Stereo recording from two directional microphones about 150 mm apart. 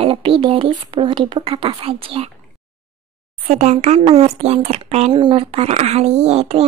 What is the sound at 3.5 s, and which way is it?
Speech, 50° right (ahead or behind).